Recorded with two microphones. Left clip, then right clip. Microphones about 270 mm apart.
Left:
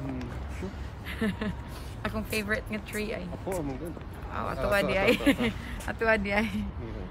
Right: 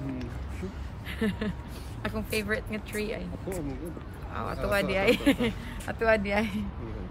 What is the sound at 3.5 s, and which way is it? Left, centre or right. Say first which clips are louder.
Speech: left 3 dB; centre.